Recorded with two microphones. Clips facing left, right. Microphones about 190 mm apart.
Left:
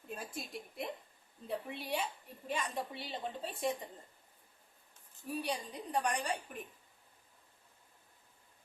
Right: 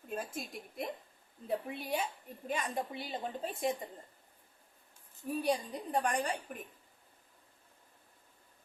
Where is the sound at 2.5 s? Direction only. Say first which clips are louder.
Right 2 dB; 45° right (ahead or behind).